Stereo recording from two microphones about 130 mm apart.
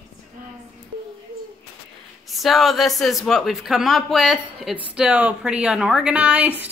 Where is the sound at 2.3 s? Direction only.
Centre (ahead or behind).